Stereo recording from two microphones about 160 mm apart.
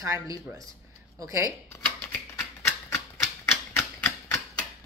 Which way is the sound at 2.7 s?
15° left (ahead or behind).